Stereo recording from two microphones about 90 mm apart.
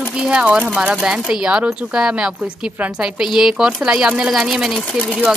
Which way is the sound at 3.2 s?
5° right (ahead or behind).